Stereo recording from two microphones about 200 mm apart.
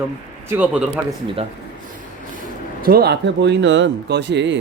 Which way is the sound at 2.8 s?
50° right (ahead or behind).